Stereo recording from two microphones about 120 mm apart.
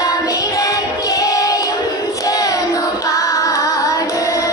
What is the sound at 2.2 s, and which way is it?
Child singing, 30° left (ahead or behind).